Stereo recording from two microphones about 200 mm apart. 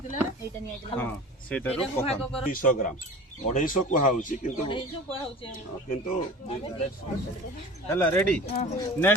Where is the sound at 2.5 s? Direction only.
45° left (ahead or behind).